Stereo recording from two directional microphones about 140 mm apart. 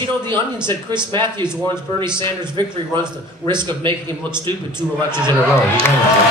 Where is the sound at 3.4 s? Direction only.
35° right (ahead or behind).